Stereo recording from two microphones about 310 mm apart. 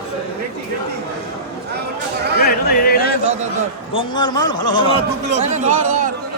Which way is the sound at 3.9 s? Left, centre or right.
Centre.